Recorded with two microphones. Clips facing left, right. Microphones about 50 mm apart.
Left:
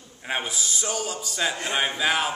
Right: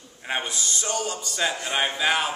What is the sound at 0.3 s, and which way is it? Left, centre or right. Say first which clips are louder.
A man's voice: even; centre.